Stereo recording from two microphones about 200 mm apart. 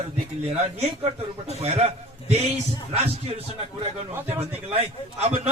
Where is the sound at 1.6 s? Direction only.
30° right (ahead or behind).